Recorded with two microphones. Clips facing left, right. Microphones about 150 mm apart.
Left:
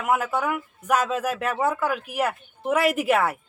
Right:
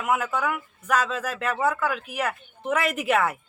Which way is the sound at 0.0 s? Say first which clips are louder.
Left 1 dB; 5° left (ahead or behind).